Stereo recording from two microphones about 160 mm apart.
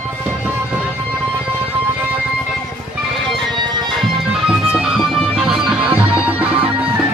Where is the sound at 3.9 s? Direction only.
5° right (ahead or behind).